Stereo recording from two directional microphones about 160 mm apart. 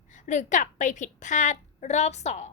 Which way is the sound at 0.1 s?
50° left (ahead or behind).